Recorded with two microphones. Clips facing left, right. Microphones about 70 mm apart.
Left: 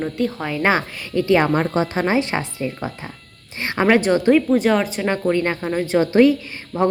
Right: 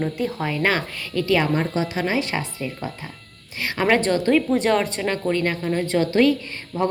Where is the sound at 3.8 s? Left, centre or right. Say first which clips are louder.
Left 4 dB; centre.